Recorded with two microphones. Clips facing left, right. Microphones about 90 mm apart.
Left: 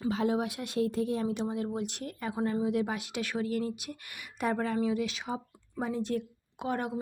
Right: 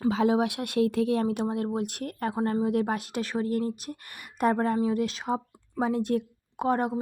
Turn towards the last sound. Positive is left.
turn(degrees=-40)  # may be behind; listen again after turning